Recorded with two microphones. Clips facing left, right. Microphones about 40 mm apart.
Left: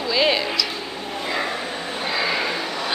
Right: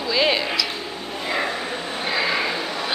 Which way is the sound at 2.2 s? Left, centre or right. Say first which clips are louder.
Right 1 dB; centre.